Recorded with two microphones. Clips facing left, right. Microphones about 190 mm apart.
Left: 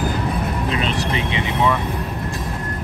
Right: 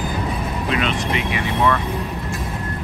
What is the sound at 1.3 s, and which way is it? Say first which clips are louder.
Vehicle: even; 15° left (ahead or behind).